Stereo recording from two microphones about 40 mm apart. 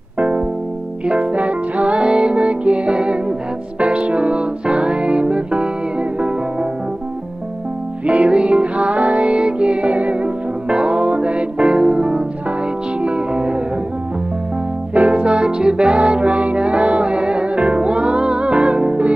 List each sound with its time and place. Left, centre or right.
0.2 s music: right
8.1 s music: right
15.0 s music: right